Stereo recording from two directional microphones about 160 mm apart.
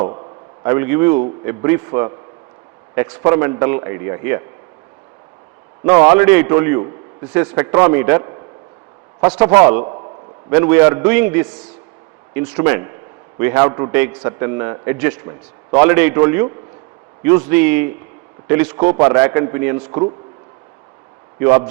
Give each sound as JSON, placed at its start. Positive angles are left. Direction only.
{"t": 0.0, "sound": "a sound", "side_deg": -30}
{"t": 0.7, "sound": "a man's voice", "side_deg": -15}
{"t": 5.8, "sound": "a man's voice", "side_deg": -15}
{"t": 7.6, "sound": "a man's voice", "side_deg": -25}
{"t": 9.2, "sound": "a man's voice", "side_deg": -15}
{"t": 9.8, "sound": "a sound", "side_deg": -30}
{"t": 10.5, "sound": "a man's voice", "side_deg": -15}
{"t": 18.9, "sound": "a man's voice", "side_deg": -20}